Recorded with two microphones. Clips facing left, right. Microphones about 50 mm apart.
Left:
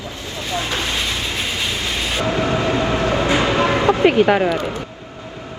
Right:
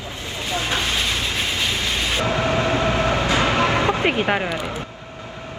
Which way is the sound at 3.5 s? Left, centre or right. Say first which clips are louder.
Left 3 dB; left.